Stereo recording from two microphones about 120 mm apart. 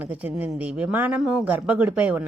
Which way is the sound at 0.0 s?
10° right (ahead or behind).